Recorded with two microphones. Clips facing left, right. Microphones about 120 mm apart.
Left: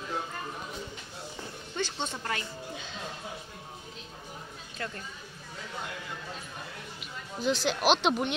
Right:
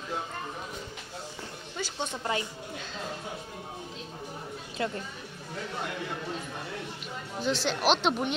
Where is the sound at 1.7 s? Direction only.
10° right (ahead or behind).